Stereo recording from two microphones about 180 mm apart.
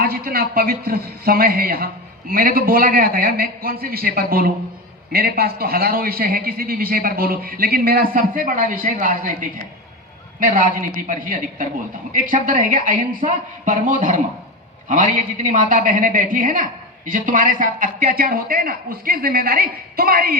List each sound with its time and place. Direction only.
0.0 s a man's voice: 55° right (ahead or behind)